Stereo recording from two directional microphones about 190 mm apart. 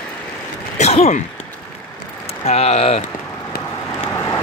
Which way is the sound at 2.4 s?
35° left (ahead or behind).